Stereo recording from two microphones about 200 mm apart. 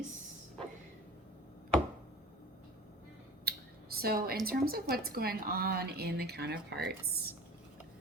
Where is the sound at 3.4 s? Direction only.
50° right (ahead or behind).